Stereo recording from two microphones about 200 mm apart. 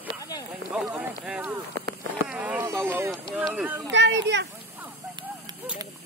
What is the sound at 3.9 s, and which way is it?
Speech, 60° right (ahead or behind).